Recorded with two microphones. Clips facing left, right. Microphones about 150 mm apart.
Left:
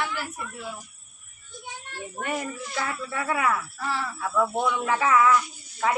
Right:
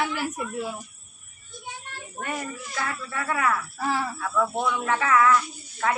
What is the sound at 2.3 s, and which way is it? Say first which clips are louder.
Speech: left 2 dB; 20° left (ahead or behind).